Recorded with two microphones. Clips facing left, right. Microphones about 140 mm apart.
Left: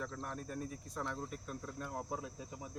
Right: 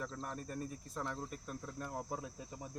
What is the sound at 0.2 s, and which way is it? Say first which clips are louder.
Speech: even; centre (ahead or behind).